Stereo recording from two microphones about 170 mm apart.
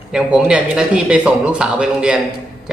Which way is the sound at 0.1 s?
5° right (ahead or behind).